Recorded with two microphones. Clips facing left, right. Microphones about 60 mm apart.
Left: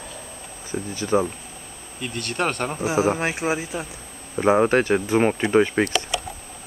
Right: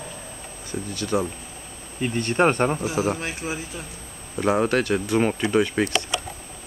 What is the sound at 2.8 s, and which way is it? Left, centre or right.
Speech, centre.